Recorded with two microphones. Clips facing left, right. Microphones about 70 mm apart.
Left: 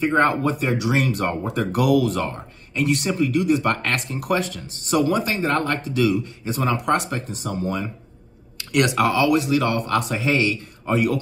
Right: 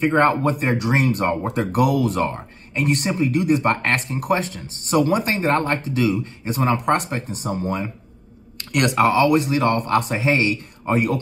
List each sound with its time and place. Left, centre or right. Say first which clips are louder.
0.0 s speech: right 2 dB; right
8.5 s a sound: left 1 dB; right
8.9 s speech: right 5 dB; right